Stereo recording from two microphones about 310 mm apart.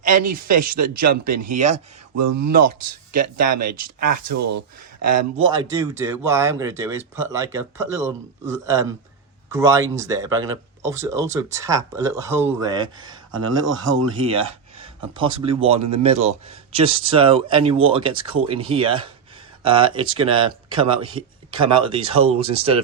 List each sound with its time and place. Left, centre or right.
0.6 s speech: right
2.2 s speech: right
2.5 s speech: right
3.4 s speech: right
5.0 s speech: right
5.5 s speech: centre
14.0 s speech: right
15.1 s speech: centre